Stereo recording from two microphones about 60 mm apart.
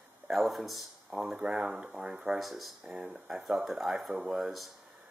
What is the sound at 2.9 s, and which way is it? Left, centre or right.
Speech, right.